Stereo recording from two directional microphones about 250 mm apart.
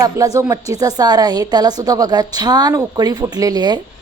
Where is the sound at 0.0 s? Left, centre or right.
Centre.